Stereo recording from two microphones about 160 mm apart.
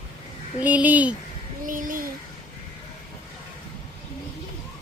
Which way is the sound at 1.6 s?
55° right (ahead or behind).